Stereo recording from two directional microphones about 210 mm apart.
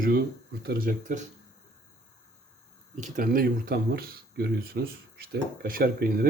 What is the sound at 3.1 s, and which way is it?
Speech, 40° right (ahead or behind).